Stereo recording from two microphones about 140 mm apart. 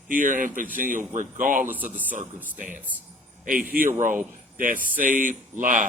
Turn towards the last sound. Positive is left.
turn(degrees=-65)  # may be behind; listen again after turning